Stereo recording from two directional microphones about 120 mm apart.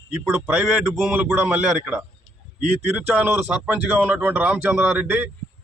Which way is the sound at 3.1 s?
10° right (ahead or behind).